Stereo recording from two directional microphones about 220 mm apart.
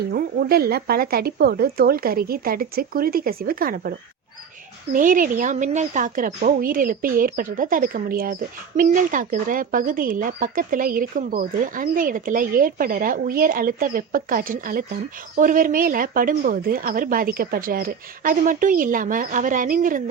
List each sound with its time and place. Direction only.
0.1 s speech: 45° right (ahead or behind)
4.9 s a woman's voice: 40° right (ahead or behind)